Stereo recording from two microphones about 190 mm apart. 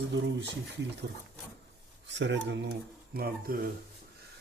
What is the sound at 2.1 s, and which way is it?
Speech, 70° right (ahead or behind).